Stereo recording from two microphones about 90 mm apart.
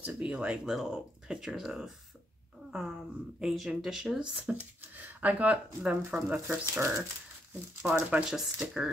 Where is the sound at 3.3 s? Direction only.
5° right (ahead or behind).